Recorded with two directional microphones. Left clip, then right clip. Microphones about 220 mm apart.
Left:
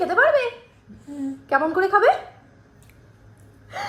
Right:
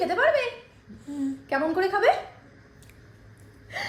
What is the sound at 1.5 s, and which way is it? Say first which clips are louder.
Speech: left 6 dB; 20° left (ahead or behind).